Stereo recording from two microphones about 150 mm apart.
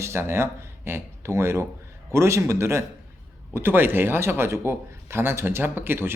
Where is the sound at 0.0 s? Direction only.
15° right (ahead or behind).